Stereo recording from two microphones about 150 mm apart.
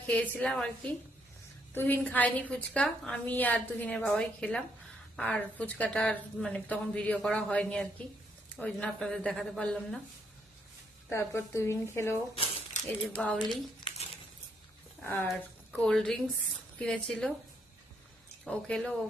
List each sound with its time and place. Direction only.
0.1 s a woman's voice: 10° left (ahead or behind)
1.7 s a woman's voice: 15° left (ahead or behind)
11.1 s a woman's voice: 15° left (ahead or behind)
13.1 s speech: 5° left (ahead or behind)
15.0 s a woman's voice: 15° left (ahead or behind)
18.4 s speech: 5° left (ahead or behind)